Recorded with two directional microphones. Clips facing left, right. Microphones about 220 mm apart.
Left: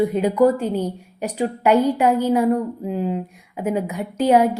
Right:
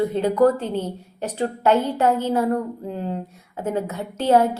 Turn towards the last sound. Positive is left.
turn(degrees=10)  # may be behind; listen again after turning